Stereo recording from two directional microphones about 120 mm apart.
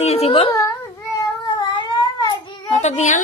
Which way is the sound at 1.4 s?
40° left (ahead or behind).